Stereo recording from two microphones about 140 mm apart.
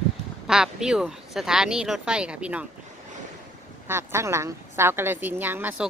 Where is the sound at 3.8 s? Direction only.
15° right (ahead or behind).